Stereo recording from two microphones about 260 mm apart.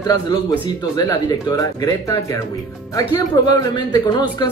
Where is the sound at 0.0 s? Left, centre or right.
Centre.